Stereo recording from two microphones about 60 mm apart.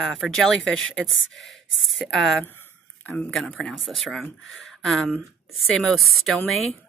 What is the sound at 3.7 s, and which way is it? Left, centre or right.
Speech, centre.